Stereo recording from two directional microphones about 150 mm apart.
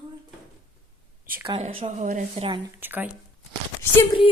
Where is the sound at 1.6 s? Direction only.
50° right (ahead or behind).